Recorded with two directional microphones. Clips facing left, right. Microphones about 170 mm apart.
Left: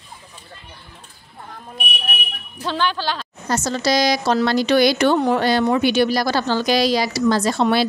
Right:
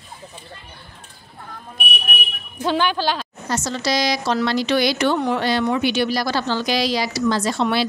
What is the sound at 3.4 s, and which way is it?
A woman's voice, 45° left (ahead or behind).